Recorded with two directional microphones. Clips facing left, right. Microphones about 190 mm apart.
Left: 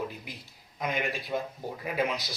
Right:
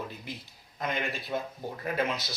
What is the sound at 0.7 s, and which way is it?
Speech, 10° left (ahead or behind).